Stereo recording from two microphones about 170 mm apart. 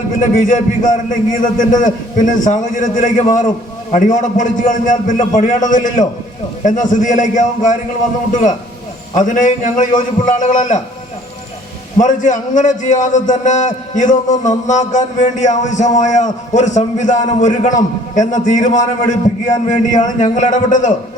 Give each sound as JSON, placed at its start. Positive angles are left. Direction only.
{"t": 0.2, "sound": "a man's voice", "side_deg": 50}
{"t": 11.9, "sound": "a man's voice", "side_deg": 50}